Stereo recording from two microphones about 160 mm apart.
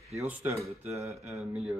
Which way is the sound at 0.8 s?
20° right (ahead or behind).